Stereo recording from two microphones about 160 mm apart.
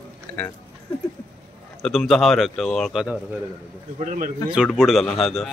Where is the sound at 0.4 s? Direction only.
5° left (ahead or behind).